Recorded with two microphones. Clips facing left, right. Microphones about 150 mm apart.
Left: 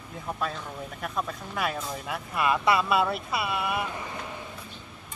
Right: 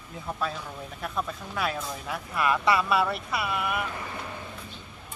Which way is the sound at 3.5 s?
20° left (ahead or behind).